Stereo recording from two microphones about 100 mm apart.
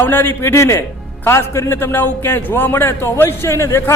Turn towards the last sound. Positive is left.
turn(degrees=30)  # may be behind; listen again after turning